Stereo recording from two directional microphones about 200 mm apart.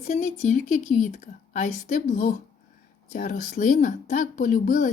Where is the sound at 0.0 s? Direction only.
35° left (ahead or behind).